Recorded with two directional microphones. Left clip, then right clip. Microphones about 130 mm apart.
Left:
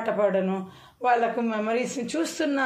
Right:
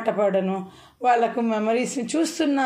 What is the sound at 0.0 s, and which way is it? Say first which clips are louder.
A woman's voice: right 2 dB; 45° right (ahead or behind).